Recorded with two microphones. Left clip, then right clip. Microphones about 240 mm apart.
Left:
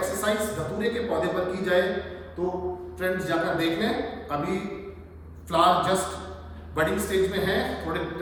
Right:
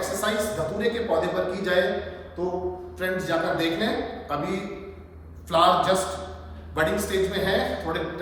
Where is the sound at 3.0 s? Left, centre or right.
Centre.